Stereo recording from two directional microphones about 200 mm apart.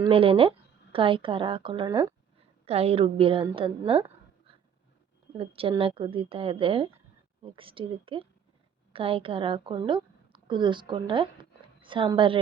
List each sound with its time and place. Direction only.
0.0 s a woman's voice: 30° right (ahead or behind)
2.6 s a woman's voice: 30° right (ahead or behind)
5.4 s a woman's voice: 25° right (ahead or behind)